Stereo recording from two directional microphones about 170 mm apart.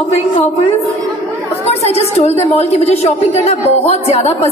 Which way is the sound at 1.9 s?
35° left (ahead or behind).